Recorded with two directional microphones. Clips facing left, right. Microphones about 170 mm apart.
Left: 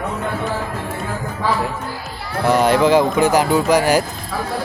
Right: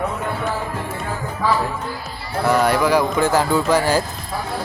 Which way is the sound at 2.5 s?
20° left (ahead or behind).